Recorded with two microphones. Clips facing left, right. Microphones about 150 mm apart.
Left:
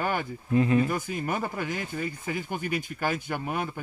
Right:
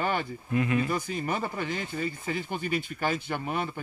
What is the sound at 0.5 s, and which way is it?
Speech, 30° left (ahead or behind).